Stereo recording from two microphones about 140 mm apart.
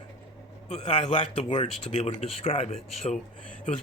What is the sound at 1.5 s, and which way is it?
Speech, 35° left (ahead or behind).